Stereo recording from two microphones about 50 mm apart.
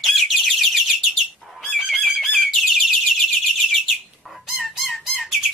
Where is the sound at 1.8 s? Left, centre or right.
Centre.